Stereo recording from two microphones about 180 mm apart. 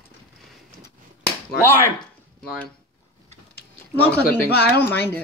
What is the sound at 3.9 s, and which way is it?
Speech, 10° left (ahead or behind).